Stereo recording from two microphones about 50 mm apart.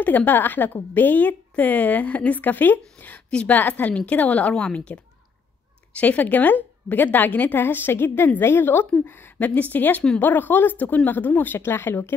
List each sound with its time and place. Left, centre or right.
0.0 s a woman's voice: left